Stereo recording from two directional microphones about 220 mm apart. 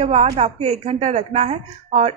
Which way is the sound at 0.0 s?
30° right (ahead or behind).